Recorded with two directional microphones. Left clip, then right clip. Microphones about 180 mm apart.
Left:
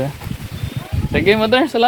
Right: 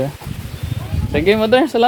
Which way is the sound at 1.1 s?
15° right (ahead or behind).